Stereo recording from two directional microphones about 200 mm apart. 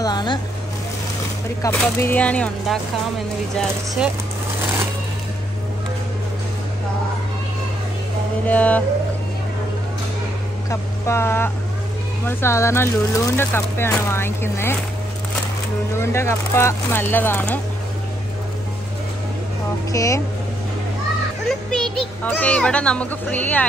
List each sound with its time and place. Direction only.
0.0 s speech: 20° left (ahead or behind)
1.6 s a child's voice: 10° left (ahead or behind)
8.5 s speech: 5° left (ahead or behind)
10.7 s speech: 15° left (ahead or behind)
16.0 s speech: 15° left (ahead or behind)
19.9 s speech: 15° left (ahead or behind)
21.5 s a child's voice: centre (ahead or behind)